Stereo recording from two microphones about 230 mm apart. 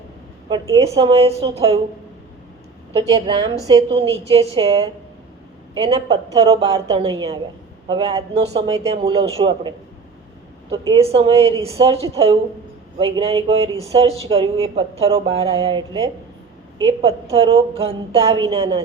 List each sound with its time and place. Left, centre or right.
0.9 s speech: right
2.9 s a woman's voice: centre